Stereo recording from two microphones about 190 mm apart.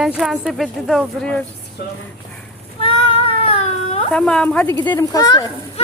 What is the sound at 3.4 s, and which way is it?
Baby cry, 35° left (ahead or behind).